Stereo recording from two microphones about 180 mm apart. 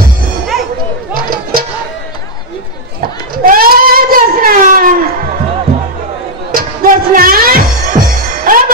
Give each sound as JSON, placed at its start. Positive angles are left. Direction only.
{"t": 1.1, "sound": "music", "side_deg": -55}
{"t": 3.4, "sound": "a sound", "side_deg": -55}
{"t": 6.5, "sound": "music", "side_deg": -50}